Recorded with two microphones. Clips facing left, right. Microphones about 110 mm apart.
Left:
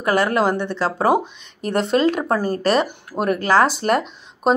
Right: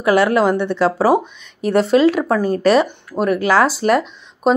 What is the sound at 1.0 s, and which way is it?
Speech, centre (ahead or behind).